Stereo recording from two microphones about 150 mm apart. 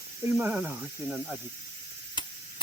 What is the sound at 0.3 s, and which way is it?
Speech, 10° right (ahead or behind).